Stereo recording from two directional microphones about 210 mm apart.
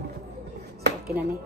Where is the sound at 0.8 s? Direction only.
50° right (ahead or behind).